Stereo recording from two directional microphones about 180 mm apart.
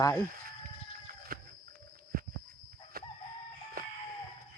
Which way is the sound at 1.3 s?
55° right (ahead or behind).